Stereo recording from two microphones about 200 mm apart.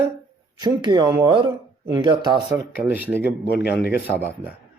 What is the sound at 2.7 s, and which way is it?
A man's voice, 10° right (ahead or behind).